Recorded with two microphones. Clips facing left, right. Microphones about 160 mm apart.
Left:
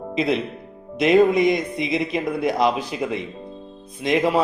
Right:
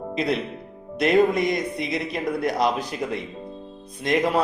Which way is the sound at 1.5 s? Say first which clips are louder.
Left 4 dB; 20° left (ahead or behind).